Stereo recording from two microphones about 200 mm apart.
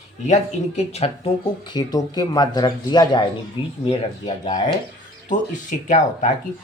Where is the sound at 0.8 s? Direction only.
30° left (ahead or behind).